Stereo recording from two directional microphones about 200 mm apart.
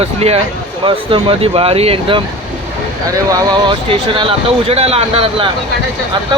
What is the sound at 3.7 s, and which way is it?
Speech, 25° right (ahead or behind).